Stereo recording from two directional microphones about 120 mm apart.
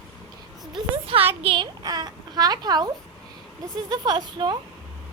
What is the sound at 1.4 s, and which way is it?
Speech, 45° right (ahead or behind).